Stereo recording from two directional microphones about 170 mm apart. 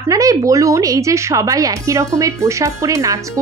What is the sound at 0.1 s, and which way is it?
A woman's voice, 20° right (ahead or behind).